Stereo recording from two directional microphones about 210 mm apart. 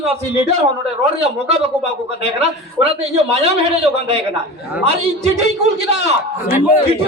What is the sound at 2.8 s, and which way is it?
A man's voice, 30° right (ahead or behind).